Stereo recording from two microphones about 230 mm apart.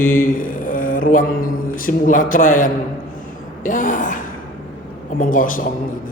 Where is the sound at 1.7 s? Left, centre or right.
Left.